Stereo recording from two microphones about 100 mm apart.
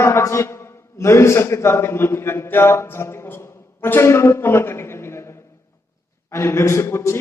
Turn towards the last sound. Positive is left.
turn(degrees=25)  # may be behind; listen again after turning